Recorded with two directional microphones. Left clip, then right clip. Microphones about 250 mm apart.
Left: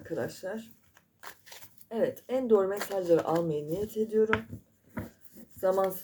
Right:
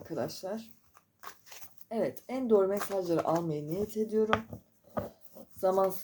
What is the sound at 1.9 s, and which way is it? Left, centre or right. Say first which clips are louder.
Speech: left 4 dB; right.